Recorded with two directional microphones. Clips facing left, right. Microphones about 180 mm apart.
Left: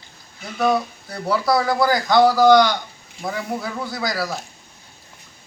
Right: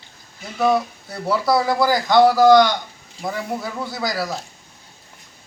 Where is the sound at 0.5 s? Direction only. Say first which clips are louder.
Right 1 dB; centre (ahead or behind).